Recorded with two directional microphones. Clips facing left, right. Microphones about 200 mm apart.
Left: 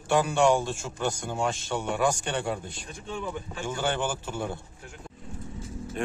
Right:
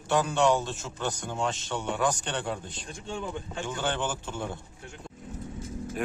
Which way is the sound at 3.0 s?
30° right (ahead or behind).